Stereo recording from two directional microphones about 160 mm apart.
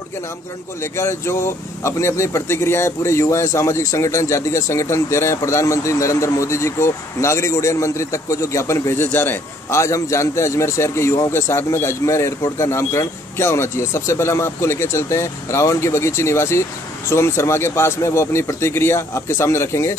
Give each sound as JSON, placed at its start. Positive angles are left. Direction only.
{"t": 0.9, "sound": "speech", "side_deg": 15}